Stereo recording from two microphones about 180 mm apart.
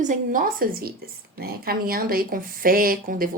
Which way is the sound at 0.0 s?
45° right (ahead or behind).